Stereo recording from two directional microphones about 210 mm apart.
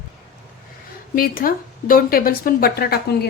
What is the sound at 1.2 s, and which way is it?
Speech, 45° left (ahead or behind).